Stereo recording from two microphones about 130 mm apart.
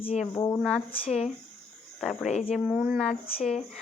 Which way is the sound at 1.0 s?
55° left (ahead or behind).